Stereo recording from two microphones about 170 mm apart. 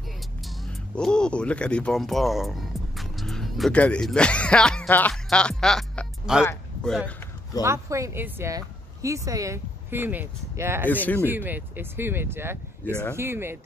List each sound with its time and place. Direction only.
0.4 s speech: centre (ahead or behind)
7.6 s speech: 15° right (ahead or behind)
10.9 s speech: 10° left (ahead or behind)
11.1 s speech: 10° right (ahead or behind)